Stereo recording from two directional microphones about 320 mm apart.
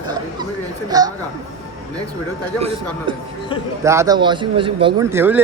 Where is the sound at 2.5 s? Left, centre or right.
Centre.